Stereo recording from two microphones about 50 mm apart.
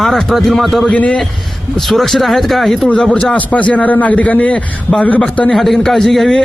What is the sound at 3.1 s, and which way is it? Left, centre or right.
A man's voice, left.